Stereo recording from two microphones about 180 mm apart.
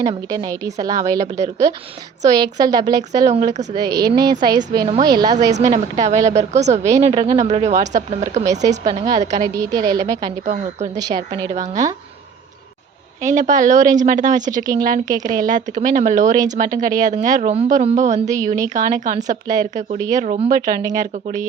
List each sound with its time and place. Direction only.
0.1 s a woman's voice: 20° right (ahead or behind)
5.5 s speech: 40° right (ahead or behind)
9.4 s a woman's voice: 20° right (ahead or behind)
13.2 s speech: 45° right (ahead or behind)